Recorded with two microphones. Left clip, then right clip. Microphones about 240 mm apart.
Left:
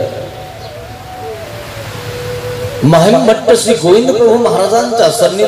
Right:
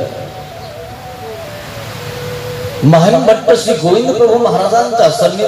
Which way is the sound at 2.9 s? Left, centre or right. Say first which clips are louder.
Even; left.